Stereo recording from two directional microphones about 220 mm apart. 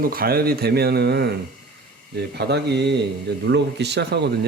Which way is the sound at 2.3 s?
50° right (ahead or behind).